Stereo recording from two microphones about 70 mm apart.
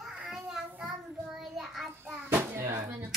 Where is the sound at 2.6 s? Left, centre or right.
Right.